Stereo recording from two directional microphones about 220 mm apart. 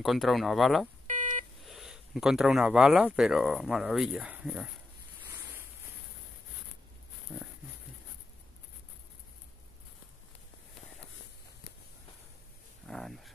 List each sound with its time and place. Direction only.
0.0 s speech: centre (ahead or behind)
1.0 s beep: 35° right (ahead or behind)
1.6 s speech: centre (ahead or behind)
7.3 s pig: 5° right (ahead or behind)
12.8 s a sound: centre (ahead or behind)